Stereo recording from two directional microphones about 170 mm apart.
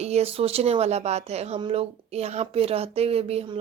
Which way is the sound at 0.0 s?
40° right (ahead or behind).